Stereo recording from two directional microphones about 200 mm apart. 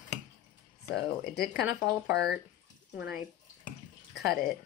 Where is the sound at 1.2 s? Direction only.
55° left (ahead or behind).